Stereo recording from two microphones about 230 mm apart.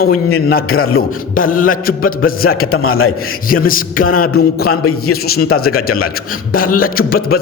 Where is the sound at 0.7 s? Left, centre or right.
Left.